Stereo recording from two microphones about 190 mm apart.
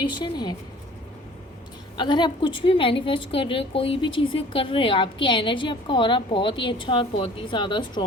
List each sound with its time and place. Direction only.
0.0 s a woman's voice: 25° left (ahead or behind)
2.0 s a woman's voice: 25° left (ahead or behind)